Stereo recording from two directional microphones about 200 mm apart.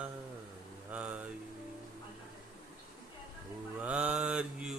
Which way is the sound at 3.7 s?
5° right (ahead or behind).